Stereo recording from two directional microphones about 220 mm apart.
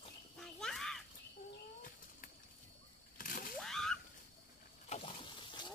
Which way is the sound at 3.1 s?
40° left (ahead or behind).